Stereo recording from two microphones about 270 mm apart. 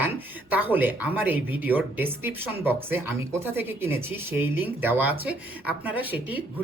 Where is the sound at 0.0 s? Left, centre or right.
Centre.